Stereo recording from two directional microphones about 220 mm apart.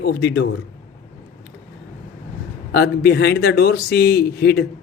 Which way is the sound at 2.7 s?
45° left (ahead or behind).